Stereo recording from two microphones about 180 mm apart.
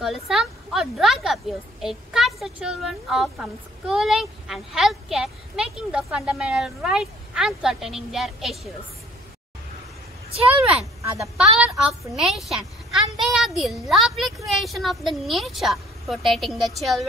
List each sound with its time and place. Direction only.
0.0 s a woman's voice: 5° right (ahead or behind)
10.3 s speech: 35° right (ahead or behind)
11.9 s a woman's voice: centre (ahead or behind)